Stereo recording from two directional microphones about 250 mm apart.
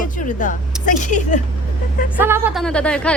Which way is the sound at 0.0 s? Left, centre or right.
Left.